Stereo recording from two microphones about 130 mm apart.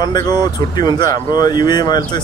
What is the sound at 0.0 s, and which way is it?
Speech, 30° left (ahead or behind).